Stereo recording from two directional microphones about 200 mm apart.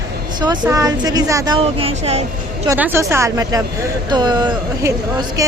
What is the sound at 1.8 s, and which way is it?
Speech, 30° right (ahead or behind).